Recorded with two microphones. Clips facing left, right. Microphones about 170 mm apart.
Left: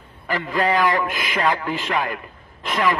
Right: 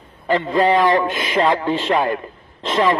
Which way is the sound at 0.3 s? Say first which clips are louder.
Right 5 dB; 25° right (ahead or behind).